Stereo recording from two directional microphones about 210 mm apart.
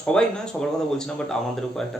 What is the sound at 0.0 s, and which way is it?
Speech, 5° left (ahead or behind).